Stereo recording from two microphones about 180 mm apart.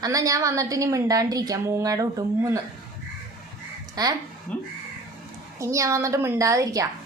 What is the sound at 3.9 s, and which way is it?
Speech, 20° right (ahead or behind).